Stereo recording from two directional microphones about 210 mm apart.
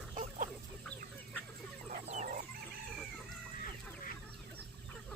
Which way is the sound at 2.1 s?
35° right (ahead or behind).